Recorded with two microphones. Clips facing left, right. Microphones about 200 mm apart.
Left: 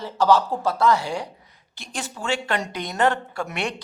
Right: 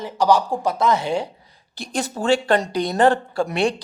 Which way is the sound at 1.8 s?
40° right (ahead or behind).